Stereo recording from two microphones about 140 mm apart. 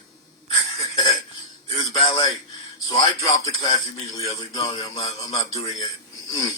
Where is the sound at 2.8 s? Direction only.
25° left (ahead or behind).